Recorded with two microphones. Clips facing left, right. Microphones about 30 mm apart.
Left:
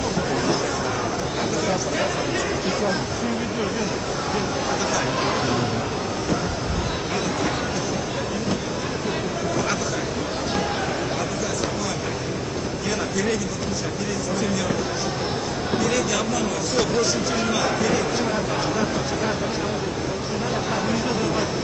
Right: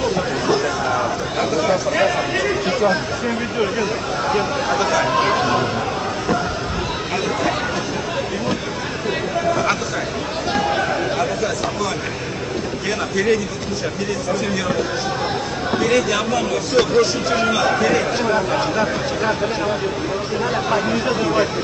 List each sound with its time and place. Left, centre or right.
4.3 s speech: right
9.5 s a sound: right
15.9 s speech: right
20.7 s speech: right